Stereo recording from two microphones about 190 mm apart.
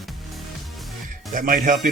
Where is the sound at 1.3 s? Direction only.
45° right (ahead or behind).